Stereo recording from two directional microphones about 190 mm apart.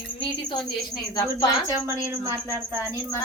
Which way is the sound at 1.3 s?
15° right (ahead or behind).